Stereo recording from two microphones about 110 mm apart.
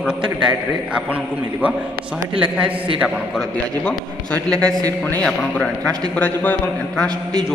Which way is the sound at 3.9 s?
10° left (ahead or behind).